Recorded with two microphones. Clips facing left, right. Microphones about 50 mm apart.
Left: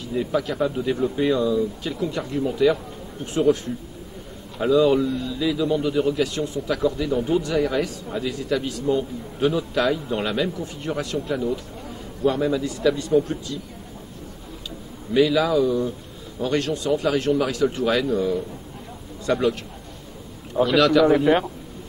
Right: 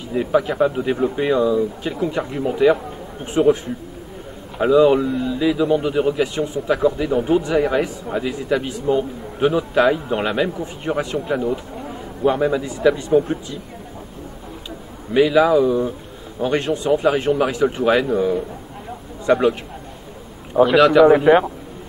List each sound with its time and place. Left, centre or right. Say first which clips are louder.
0.1 s a man's voice: right 5 dB; right
15.1 s a man's voice: right 4 dB; right
20.5 s a man's voice: right 5 dB; centre